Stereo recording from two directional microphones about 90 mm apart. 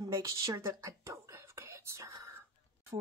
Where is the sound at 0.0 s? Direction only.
40° right (ahead or behind).